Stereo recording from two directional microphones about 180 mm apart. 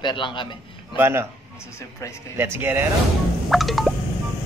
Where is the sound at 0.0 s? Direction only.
25° left (ahead or behind).